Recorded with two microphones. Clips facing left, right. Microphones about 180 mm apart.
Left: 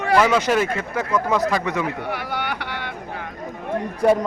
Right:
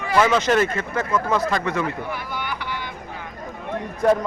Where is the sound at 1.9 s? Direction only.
75° left (ahead or behind).